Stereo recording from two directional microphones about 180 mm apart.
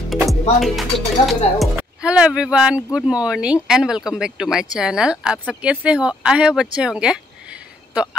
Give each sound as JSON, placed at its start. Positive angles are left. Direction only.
{"t": 0.1, "sound": "music", "side_deg": 0}
{"t": 0.6, "sound": "speech", "side_deg": 0}